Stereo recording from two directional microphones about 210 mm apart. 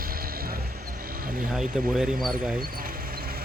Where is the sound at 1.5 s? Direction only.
5° right (ahead or behind).